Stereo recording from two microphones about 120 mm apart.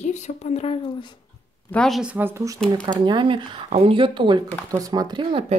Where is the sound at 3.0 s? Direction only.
45° right (ahead or behind).